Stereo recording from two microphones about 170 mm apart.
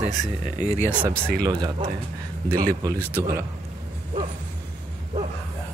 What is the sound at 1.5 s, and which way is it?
Speech, 25° right (ahead or behind).